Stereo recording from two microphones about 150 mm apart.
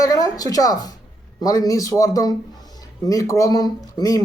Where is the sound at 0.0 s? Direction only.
25° left (ahead or behind).